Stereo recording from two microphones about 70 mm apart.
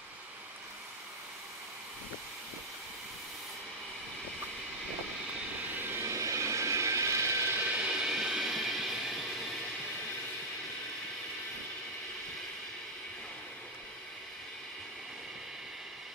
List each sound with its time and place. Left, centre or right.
5.8 s vehicle: right
7.6 s vehicle: centre